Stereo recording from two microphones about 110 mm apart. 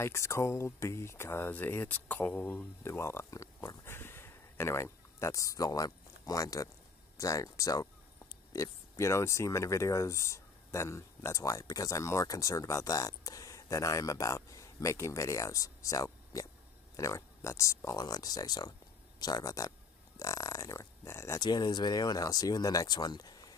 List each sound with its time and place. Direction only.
0.0 s speech: 25° left (ahead or behind)
21.4 s speech: 40° left (ahead or behind)